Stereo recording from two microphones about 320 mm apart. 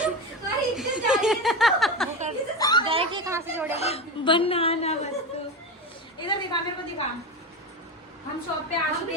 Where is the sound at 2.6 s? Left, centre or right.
Centre.